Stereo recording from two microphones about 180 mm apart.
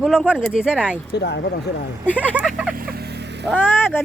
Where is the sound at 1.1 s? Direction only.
70° left (ahead or behind).